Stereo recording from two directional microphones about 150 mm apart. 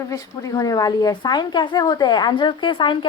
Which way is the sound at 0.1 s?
25° left (ahead or behind).